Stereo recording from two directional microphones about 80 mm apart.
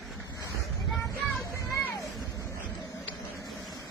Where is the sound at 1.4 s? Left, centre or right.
Left.